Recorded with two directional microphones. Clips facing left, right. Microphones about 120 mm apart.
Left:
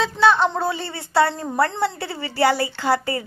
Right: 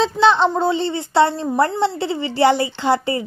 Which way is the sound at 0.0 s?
25° right (ahead or behind).